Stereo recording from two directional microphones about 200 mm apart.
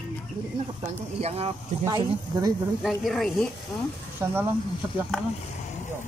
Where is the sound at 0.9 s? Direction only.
30° right (ahead or behind).